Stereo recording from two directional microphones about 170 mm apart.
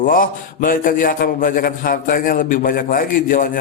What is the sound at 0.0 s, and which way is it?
A man's voice, 55° left (ahead or behind).